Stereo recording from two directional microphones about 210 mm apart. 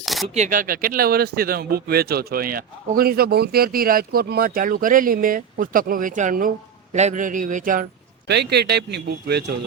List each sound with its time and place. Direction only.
0.0 s coin: centre (ahead or behind)
0.3 s a man's voice: 40° right (ahead or behind)
8.3 s speech: 50° right (ahead or behind)